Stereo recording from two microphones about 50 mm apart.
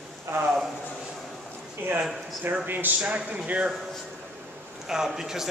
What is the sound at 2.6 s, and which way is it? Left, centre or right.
Speech, right.